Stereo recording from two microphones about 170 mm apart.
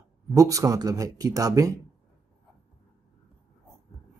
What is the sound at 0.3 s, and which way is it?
Speech, 20° right (ahead or behind).